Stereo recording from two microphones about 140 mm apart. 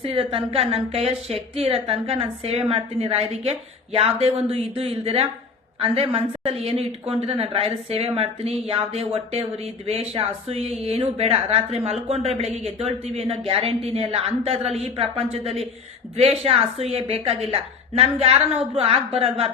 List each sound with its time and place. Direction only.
0.0 s a woman's voice: 40° right (ahead or behind)